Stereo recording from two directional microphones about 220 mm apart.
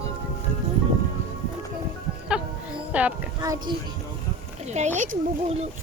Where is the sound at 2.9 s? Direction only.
5° right (ahead or behind).